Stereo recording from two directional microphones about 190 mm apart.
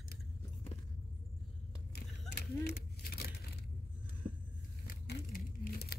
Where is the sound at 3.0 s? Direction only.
55° left (ahead or behind).